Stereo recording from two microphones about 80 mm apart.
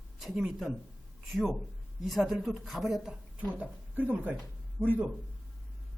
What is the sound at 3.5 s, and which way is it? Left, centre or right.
Speech, centre.